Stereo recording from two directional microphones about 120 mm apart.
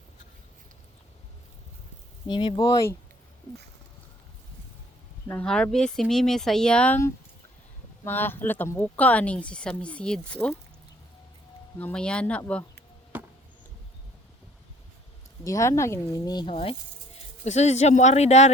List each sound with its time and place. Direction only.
2.2 s speech: 40° left (ahead or behind)
5.7 s speech: 5° left (ahead or behind)
8.0 s speech: 15° left (ahead or behind)
11.8 s speech: 10° left (ahead or behind)
13.1 s chop: 15° right (ahead or behind)
15.4 s speech: 25° left (ahead or behind)
16.5 s speech: 50° left (ahead or behind)
17.4 s speech: 70° left (ahead or behind)